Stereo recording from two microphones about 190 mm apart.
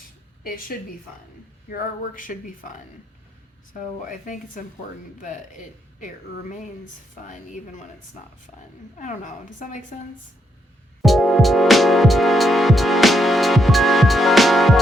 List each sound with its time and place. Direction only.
0.4 s speech: 50° left (ahead or behind)
9.0 s speech: 45° left (ahead or behind)
11.0 s music: centre (ahead or behind)